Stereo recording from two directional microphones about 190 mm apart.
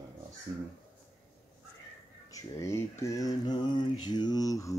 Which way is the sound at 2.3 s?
15° left (ahead or behind).